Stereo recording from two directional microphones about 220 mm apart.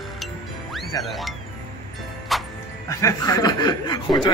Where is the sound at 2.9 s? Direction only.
15° left (ahead or behind).